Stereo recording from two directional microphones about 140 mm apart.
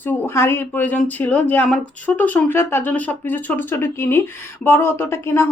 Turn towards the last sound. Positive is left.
turn(degrees=15)  # may be behind; listen again after turning